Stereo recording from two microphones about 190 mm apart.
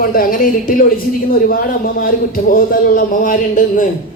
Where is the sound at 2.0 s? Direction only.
50° left (ahead or behind).